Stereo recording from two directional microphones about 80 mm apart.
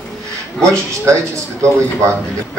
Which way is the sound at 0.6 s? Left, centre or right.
Right.